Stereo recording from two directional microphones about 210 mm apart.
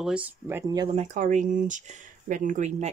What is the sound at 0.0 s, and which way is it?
Speech, 5° right (ahead or behind).